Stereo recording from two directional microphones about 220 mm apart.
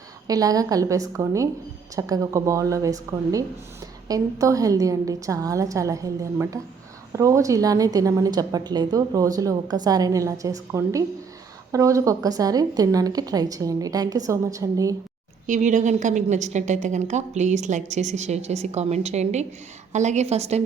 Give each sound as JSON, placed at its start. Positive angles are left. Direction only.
{"t": 0.3, "sound": "a woman's voice", "side_deg": -15}
{"t": 15.4, "sound": "a woman's voice", "side_deg": -35}